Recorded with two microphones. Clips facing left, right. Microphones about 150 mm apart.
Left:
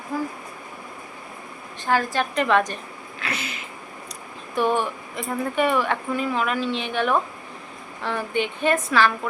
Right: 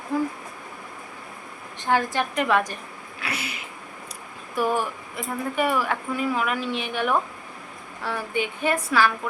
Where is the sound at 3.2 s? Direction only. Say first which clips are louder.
Left 1 dB; 10° right (ahead or behind).